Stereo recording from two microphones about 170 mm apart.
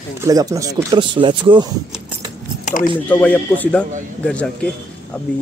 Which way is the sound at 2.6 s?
50° left (ahead or behind).